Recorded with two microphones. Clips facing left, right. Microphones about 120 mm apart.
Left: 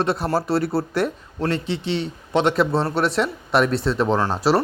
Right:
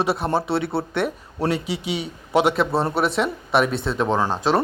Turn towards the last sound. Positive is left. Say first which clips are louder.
# left 1 dB
turn(degrees=5)  # may be behind; listen again after turning